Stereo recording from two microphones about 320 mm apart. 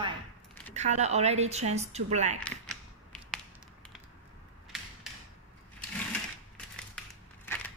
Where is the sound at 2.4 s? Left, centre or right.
Centre.